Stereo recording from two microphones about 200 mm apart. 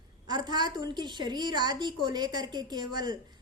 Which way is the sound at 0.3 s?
20° right (ahead or behind).